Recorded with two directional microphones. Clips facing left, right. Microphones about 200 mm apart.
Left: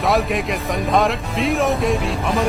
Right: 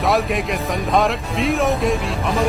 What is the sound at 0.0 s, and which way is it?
Speech, centre (ahead or behind).